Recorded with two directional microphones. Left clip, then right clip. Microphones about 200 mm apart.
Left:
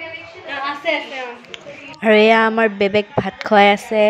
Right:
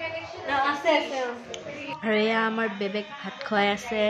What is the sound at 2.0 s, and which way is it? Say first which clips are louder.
A woman's voice: left 13 dB; 40° left (ahead or behind).